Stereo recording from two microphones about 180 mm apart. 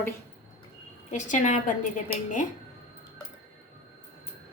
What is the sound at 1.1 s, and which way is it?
Speech, 40° left (ahead or behind).